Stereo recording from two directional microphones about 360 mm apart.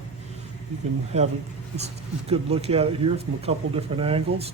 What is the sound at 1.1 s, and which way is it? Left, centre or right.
Speech, centre.